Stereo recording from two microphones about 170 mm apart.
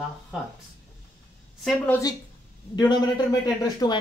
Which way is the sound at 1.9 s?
20° left (ahead or behind).